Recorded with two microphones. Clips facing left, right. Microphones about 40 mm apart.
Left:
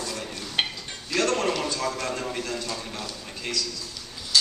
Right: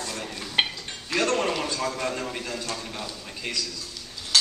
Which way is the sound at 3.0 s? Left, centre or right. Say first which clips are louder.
Even; centre.